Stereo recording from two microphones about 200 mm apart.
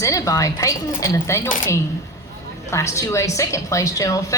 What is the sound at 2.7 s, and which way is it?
A woman's voice, 15° left (ahead or behind).